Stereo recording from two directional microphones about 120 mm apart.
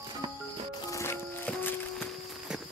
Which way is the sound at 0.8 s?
25° left (ahead or behind).